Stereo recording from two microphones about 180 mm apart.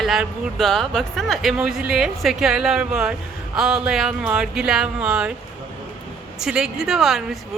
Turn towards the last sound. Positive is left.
turn(degrees=0)  # may be behind; listen again after turning